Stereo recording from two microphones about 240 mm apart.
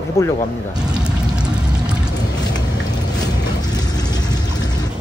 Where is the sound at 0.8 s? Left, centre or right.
Centre.